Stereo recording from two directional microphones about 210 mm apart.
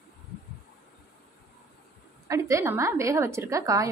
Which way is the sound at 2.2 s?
15° right (ahead or behind).